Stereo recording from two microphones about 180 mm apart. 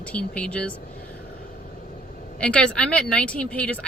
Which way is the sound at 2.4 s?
5° left (ahead or behind).